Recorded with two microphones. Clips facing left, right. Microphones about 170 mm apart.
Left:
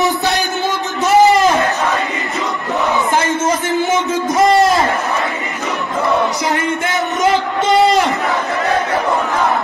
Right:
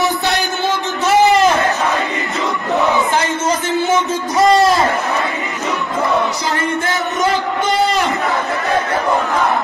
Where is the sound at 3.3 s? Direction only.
20° left (ahead or behind).